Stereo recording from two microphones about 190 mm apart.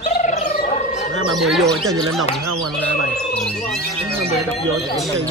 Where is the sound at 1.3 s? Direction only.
Centre (ahead or behind).